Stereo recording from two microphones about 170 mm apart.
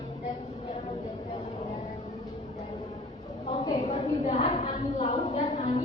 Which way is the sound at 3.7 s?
40° left (ahead or behind).